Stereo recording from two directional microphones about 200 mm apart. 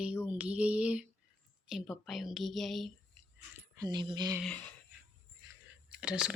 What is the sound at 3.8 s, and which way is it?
Speech, 20° right (ahead or behind).